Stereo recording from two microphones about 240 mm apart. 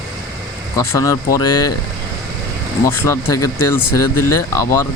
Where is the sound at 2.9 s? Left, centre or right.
Centre.